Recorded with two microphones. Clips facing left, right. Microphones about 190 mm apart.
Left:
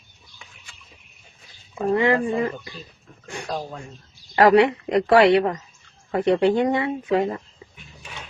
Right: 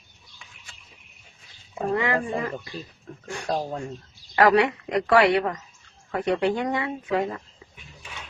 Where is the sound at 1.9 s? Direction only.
25° left (ahead or behind).